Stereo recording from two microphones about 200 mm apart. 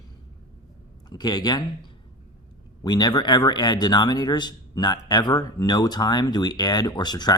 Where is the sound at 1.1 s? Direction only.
20° left (ahead or behind).